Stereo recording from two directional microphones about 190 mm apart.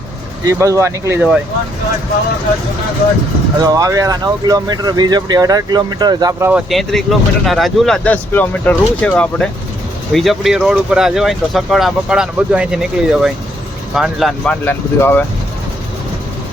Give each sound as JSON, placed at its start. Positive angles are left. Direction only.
{"t": 0.4, "sound": "speech", "side_deg": -15}
{"t": 3.6, "sound": "speech", "side_deg": -20}
{"t": 6.5, "sound": "speech", "side_deg": 0}